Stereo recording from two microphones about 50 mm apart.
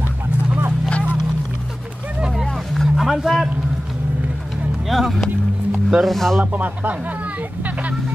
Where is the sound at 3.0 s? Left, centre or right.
Centre.